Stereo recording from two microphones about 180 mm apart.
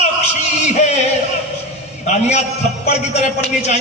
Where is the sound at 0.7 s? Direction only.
40° left (ahead or behind).